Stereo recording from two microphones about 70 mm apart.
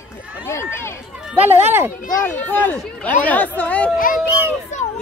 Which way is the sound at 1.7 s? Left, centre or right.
Right.